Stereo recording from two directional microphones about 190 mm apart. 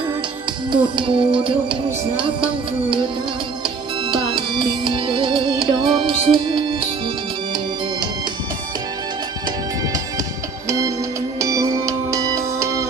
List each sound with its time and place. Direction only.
0.7 s music: 25° right (ahead or behind)
4.1 s music: 25° right (ahead or behind)
11.3 s music: 15° right (ahead or behind)